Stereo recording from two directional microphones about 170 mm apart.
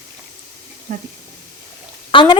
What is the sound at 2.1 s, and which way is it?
Speech, 30° left (ahead or behind).